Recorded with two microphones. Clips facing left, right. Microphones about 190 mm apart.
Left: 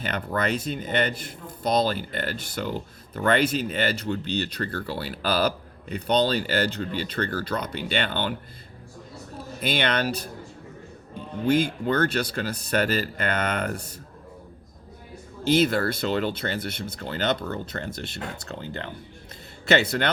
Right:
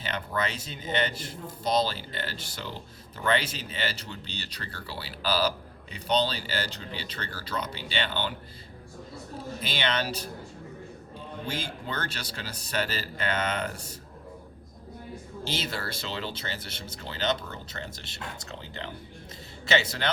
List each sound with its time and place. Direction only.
0.0 s speech: 55° left (ahead or behind)
9.6 s speech: 55° left (ahead or behind)
11.4 s speech: 55° left (ahead or behind)
15.4 s speech: 55° left (ahead or behind)